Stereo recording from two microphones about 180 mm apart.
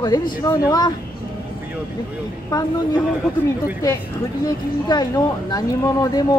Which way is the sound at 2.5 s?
20° left (ahead or behind).